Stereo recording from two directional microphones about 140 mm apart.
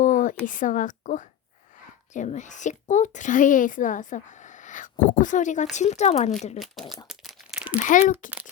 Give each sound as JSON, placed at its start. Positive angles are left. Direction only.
{"t": 0.0, "sound": "a sound", "side_deg": 65}
{"t": 0.4, "sound": "a woman's voice", "side_deg": 70}
{"t": 6.6, "sound": "speech", "side_deg": 0}
{"t": 7.1, "sound": "crumpling", "side_deg": 0}
{"t": 7.9, "sound": "a woman's voice", "side_deg": 65}